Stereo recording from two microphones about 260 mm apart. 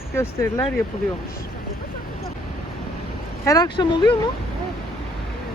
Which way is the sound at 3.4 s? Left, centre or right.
Centre.